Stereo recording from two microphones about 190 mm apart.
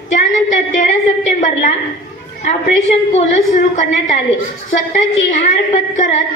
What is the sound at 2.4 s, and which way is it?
A woman's voice, 35° left (ahead or behind).